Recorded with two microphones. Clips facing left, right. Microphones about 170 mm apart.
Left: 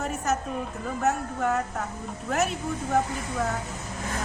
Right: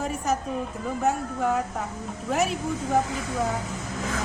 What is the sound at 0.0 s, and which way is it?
A woman's voice, centre (ahead or behind).